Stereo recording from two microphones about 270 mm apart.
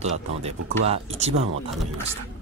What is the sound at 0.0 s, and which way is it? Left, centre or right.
Speech, right.